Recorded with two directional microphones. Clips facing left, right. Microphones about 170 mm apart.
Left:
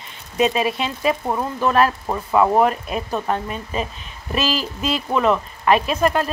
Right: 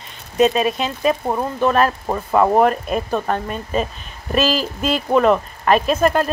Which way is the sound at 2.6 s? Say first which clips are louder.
Right 3 dB; 45° right (ahead or behind).